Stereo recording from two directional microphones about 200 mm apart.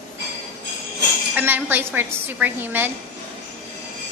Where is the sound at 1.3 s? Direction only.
10° right (ahead or behind).